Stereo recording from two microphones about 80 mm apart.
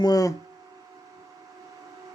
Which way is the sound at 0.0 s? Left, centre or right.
Left.